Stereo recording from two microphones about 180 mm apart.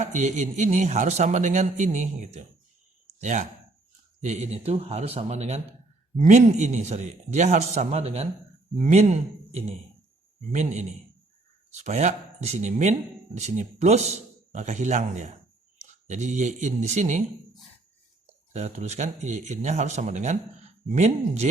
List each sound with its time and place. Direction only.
0.0 s a man's voice: 40° right (ahead or behind)
10.5 s a man's voice: 40° right (ahead or behind)
18.3 s a man's voice: 40° right (ahead or behind)